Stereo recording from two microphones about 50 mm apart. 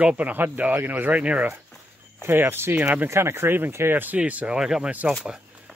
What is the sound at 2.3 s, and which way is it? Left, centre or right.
Speech, right.